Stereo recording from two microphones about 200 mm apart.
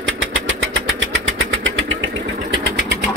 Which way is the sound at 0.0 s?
65° right (ahead or behind).